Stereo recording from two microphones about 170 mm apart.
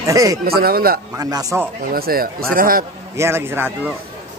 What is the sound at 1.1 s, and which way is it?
Speech, 20° right (ahead or behind).